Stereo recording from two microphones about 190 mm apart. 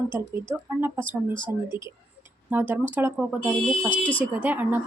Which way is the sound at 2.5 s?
10° right (ahead or behind).